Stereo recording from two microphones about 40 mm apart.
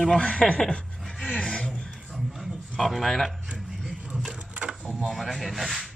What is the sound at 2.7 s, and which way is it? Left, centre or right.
Speech, centre.